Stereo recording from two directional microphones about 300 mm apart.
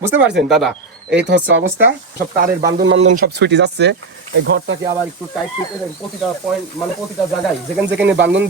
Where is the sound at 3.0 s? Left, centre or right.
Right.